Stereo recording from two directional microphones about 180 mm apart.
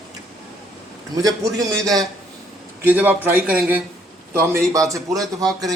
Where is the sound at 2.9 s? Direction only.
10° right (ahead or behind).